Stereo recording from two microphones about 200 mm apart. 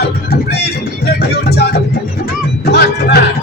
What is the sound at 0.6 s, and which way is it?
Music, 55° left (ahead or behind).